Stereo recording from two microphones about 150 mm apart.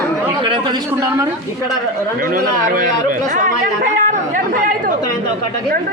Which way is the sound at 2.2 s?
70° right (ahead or behind).